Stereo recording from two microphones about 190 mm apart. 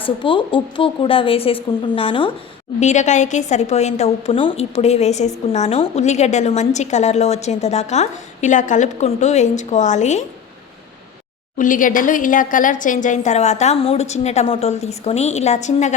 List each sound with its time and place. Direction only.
0.0 s a woman's voice: 25° left (ahead or behind)
2.8 s a woman's voice: 40° left (ahead or behind)
11.5 s a woman's voice: 45° left (ahead or behind)